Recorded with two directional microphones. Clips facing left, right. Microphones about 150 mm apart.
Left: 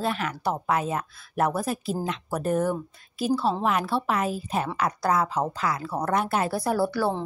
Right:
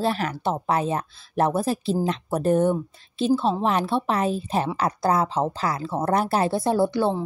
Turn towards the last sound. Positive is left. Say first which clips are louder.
# right 3 dB
turn(degrees=-20)  # may be behind; listen again after turning